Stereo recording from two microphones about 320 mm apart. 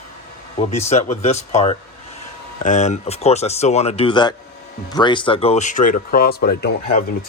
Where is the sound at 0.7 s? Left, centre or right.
Left.